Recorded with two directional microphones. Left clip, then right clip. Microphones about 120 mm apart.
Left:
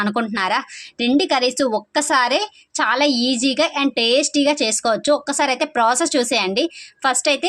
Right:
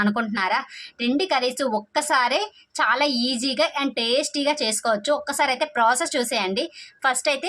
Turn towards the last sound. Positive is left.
turn(degrees=30)  # may be behind; listen again after turning